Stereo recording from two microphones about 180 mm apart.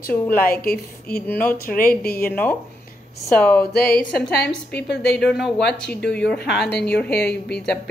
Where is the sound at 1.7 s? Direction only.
55° left (ahead or behind).